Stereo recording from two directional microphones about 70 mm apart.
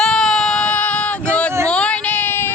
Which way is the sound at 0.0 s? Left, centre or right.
Centre.